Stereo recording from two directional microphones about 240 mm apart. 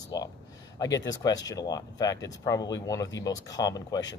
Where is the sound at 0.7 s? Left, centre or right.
Centre.